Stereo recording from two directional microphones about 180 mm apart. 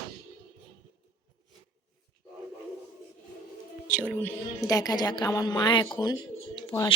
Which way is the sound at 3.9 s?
5° left (ahead or behind).